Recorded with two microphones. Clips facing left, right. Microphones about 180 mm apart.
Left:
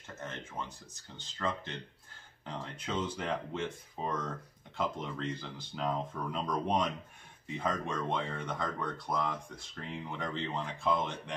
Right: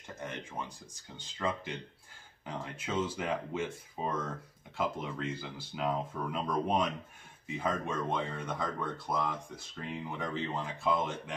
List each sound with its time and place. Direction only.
0.2 s speech: 15° right (ahead or behind)